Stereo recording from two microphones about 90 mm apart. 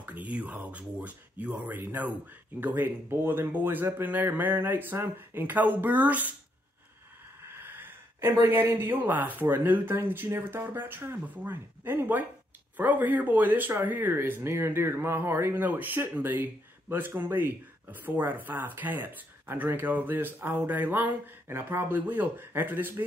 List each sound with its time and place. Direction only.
0.0 s speech: 15° right (ahead or behind)
7.4 s speech: 25° right (ahead or behind)